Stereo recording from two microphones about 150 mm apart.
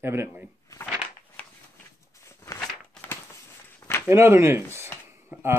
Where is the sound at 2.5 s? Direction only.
10° left (ahead or behind).